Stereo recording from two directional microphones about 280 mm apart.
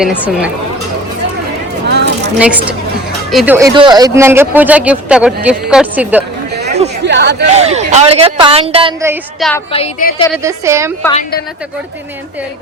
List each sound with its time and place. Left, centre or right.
0.0 s a man's voice: centre
1.9 s a sound: right
3.3 s a woman's voice: centre
7.0 s speech: right
7.5 s a woman's voice: right
9.4 s a man's voice: centre
9.7 s a woman's voice: left
10.3 s a woman's voice: centre
11.1 s a woman's voice: left